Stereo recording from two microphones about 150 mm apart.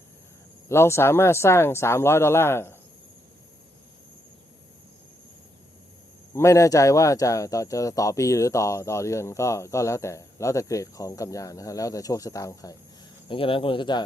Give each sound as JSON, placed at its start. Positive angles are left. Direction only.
{"t": 0.7, "sound": "speech", "side_deg": 15}
{"t": 6.3, "sound": "speech", "side_deg": 20}
{"t": 13.2, "sound": "speech", "side_deg": 35}